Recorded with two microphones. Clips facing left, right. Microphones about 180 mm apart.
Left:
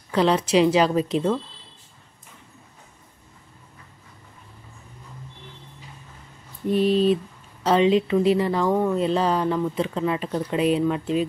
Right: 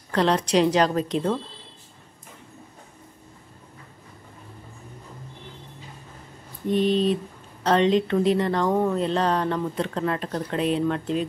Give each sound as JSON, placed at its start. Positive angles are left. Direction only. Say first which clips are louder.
{"t": 0.1, "sound": "speech", "louder": "left 2 dB", "side_deg": 5}
{"t": 6.7, "sound": "speech", "louder": "left 2 dB", "side_deg": 5}